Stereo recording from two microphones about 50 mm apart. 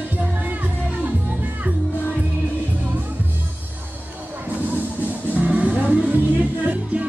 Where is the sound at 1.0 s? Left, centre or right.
Right.